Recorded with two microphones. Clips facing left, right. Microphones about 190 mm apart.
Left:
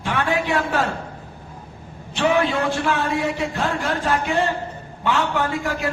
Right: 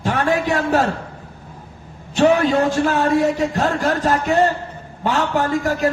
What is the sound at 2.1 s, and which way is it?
A man's voice, 40° right (ahead or behind).